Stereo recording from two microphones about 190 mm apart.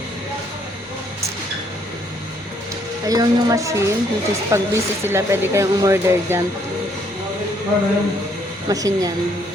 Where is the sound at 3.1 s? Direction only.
20° right (ahead or behind).